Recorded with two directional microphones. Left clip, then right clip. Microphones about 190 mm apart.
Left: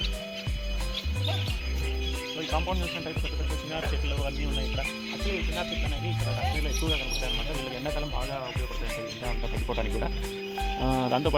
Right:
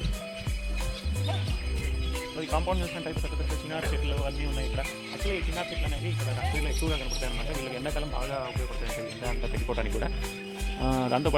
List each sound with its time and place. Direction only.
2.5 s speech: centre (ahead or behind)
9.6 s speech: 35° left (ahead or behind)
10.8 s speech: 20° left (ahead or behind)